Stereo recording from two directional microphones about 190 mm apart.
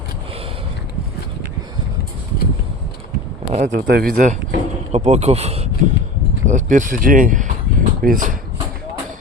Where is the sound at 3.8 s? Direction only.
55° right (ahead or behind).